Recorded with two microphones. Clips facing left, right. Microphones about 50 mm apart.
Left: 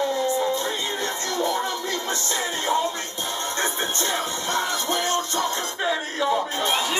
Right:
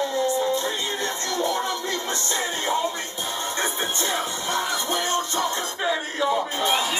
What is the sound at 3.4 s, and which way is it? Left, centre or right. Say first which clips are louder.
Music: left 1 dB; centre.